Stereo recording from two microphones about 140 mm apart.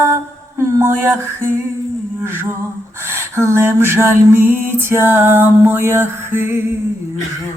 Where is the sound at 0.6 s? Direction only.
20° right (ahead or behind).